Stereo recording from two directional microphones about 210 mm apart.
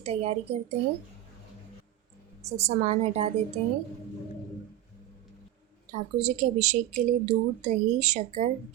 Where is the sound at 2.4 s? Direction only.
30° right (ahead or behind).